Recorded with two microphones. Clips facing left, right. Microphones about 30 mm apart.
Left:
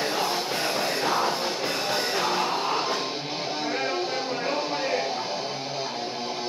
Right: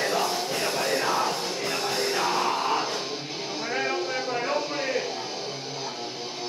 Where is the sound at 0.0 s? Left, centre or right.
Centre.